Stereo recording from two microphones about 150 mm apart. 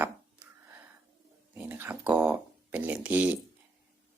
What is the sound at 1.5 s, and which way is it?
Speech, 10° right (ahead or behind).